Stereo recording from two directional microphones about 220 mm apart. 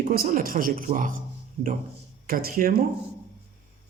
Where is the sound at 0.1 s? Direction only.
40° right (ahead or behind).